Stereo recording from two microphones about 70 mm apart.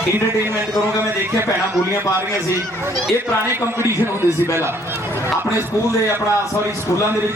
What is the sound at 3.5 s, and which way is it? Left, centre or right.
A man's voice, right.